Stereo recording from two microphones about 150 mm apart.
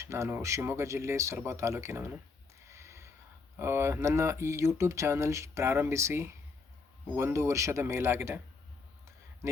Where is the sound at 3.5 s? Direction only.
15° right (ahead or behind).